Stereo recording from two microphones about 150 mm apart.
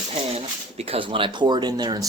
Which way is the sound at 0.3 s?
40° right (ahead or behind).